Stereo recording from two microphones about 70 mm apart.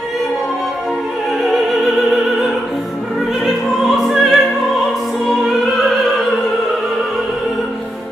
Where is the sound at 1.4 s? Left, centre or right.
Centre.